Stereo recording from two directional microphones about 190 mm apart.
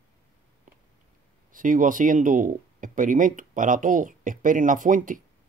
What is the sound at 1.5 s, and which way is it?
Speech, 45° right (ahead or behind).